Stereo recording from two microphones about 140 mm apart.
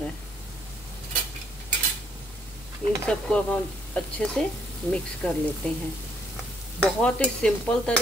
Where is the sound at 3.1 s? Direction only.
5° left (ahead or behind).